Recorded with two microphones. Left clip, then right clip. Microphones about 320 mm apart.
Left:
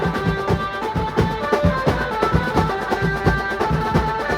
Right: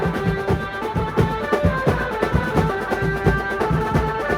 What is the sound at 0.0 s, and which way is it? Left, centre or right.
Music, left.